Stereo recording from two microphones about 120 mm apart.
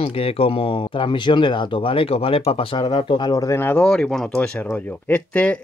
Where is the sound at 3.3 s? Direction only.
25° left (ahead or behind).